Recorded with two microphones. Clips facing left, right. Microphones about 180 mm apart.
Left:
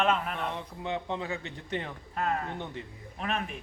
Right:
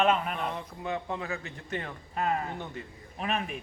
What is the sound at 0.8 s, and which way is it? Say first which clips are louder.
Speech: even; 25° left (ahead or behind).